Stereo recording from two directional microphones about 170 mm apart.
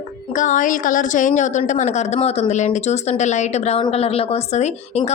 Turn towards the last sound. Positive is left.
turn(degrees=40)  # may be behind; listen again after turning